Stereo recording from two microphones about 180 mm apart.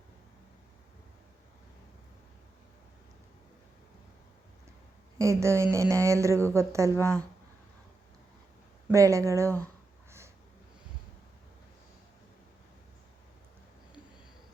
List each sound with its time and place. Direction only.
5.1 s speech: 15° right (ahead or behind)
8.9 s speech: 15° right (ahead or behind)
10.1 s a sound: 15° right (ahead or behind)